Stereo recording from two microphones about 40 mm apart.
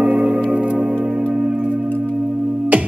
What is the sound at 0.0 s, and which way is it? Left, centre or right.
Music, right.